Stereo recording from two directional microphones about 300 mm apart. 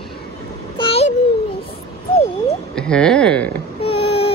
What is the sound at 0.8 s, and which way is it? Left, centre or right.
Babbling, centre.